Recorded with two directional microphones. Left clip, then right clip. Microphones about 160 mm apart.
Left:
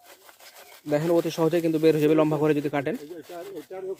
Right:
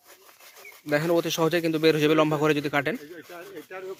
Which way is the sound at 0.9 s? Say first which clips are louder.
Even; 5° left (ahead or behind).